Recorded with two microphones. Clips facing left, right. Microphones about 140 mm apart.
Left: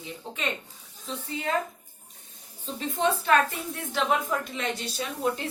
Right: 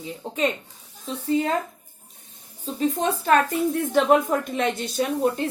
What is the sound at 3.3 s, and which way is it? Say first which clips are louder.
A woman's voice: right 4 dB; 45° right (ahead or behind).